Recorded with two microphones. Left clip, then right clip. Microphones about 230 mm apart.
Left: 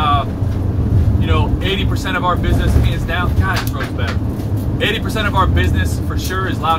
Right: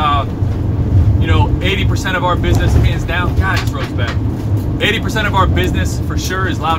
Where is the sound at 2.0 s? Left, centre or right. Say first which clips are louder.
Right 2 dB; centre.